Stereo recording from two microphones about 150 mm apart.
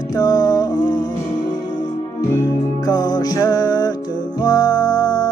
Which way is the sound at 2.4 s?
25° left (ahead or behind).